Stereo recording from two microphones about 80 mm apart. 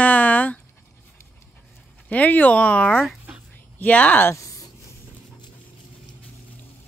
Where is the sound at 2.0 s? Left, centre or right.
Centre.